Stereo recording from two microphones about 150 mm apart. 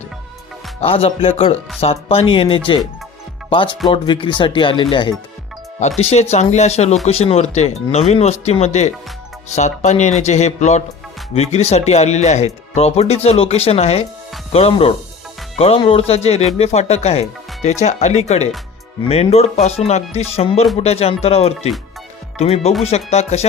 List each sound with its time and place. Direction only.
0.8 s speech: 40° left (ahead or behind)
6.0 s speech: 45° left (ahead or behind)